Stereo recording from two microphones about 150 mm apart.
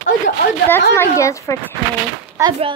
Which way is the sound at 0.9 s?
20° left (ahead or behind).